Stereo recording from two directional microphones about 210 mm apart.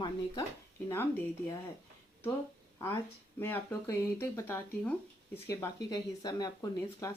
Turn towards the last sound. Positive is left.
turn(degrees=15)  # may be behind; listen again after turning